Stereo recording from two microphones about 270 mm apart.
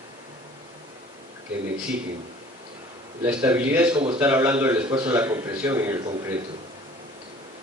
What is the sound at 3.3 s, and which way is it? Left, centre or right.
Speech, centre.